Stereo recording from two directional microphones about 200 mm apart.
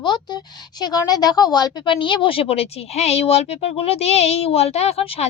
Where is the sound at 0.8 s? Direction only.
20° left (ahead or behind).